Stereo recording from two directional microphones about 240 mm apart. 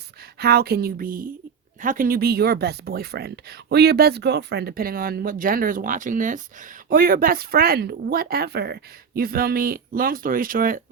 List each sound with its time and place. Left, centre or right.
0.3 s speech: right